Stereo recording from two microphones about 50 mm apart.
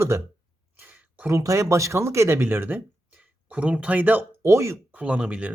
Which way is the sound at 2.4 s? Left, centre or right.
Right.